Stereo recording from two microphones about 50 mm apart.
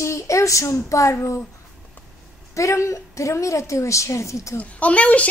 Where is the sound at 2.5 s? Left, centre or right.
Left.